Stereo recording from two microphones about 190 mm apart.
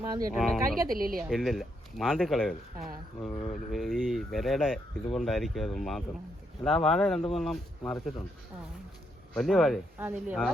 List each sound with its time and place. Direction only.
0.0 s speech: 15° right (ahead or behind)
0.3 s speech: centre (ahead or behind)
0.9 s a woman's voice: 50° right (ahead or behind)
1.3 s speech: centre (ahead or behind)
9.3 s speech: centre (ahead or behind)